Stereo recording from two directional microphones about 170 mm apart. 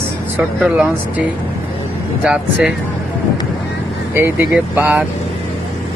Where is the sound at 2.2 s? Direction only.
5° right (ahead or behind).